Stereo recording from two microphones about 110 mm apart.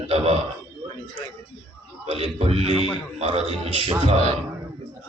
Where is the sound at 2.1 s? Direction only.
65° right (ahead or behind).